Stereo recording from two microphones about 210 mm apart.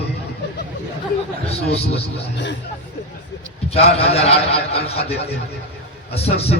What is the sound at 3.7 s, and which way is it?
A man's voice, 30° left (ahead or behind).